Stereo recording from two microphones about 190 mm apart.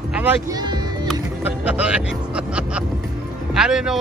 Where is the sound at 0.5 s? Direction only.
20° right (ahead or behind).